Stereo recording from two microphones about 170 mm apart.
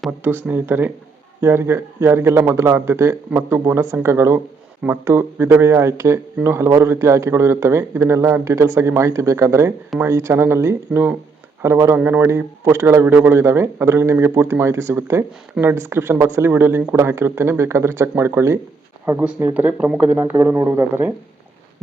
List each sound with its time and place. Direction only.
0.2 s speech: 10° right (ahead or behind)